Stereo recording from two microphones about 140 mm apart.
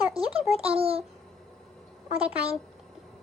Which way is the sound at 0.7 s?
45° right (ahead or behind).